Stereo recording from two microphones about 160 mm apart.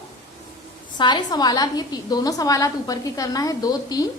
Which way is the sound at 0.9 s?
25° left (ahead or behind).